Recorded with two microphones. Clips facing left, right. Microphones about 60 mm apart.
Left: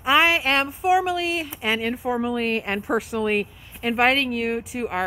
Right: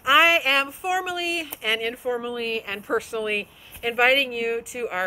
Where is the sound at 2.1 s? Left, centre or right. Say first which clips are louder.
Left 4 dB; left.